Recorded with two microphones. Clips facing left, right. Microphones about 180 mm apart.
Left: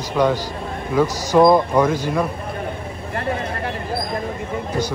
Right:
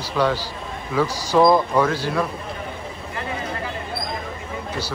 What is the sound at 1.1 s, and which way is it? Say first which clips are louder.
Speech: left 3 dB; 10° right (ahead or behind).